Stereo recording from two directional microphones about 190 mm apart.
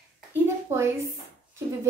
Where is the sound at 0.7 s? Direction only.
15° right (ahead or behind).